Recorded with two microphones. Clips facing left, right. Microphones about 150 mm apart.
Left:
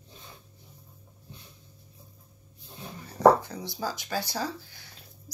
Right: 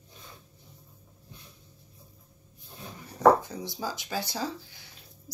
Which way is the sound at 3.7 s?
20° right (ahead or behind).